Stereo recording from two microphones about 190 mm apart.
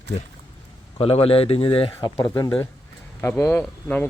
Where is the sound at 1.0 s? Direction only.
30° left (ahead or behind).